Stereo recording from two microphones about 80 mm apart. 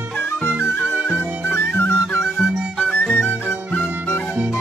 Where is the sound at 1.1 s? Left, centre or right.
Left.